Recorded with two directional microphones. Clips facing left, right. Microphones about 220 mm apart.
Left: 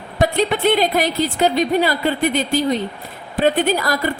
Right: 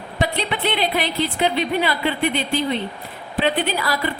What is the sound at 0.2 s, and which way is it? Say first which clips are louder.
A woman's voice: left 6 dB; 45° left (ahead or behind).